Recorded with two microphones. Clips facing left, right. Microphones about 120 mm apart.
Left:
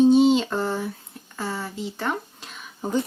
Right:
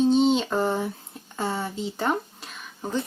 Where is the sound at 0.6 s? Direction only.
15° right (ahead or behind).